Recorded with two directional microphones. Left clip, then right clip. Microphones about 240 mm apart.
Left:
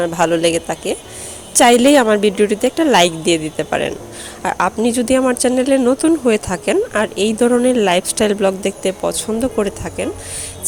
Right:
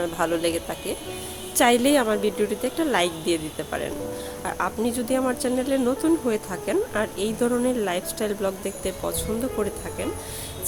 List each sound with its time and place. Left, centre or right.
0.0 s speech: left